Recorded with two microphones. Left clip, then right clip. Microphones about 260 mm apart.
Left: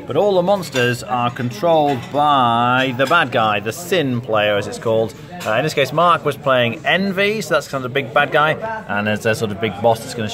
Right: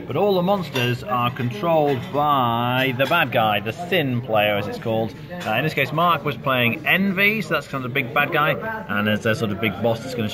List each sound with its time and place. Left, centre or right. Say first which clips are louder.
0.1 s speech: left 5 dB; left